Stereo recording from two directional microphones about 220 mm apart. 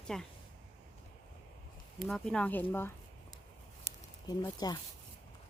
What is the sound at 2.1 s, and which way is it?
Speech, 5° left (ahead or behind).